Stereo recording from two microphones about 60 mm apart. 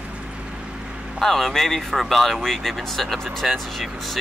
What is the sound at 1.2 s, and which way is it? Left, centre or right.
Speech, centre.